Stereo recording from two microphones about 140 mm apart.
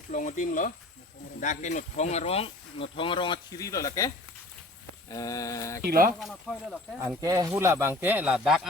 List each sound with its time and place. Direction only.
0.1 s speech: 65° left (ahead or behind); by 4.1 s 25° left (ahead or behind)
5.0 s a sound: 25° left (ahead or behind)
5.8 s speech: 90° right
6.1 s speech: centre (ahead or behind)
7.2 s speech: 25° right (ahead or behind); by 8.6 s 5° right (ahead or behind)